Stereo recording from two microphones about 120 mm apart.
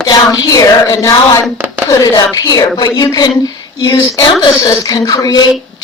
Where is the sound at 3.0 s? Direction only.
30° left (ahead or behind).